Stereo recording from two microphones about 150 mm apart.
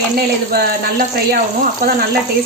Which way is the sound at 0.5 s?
90° right.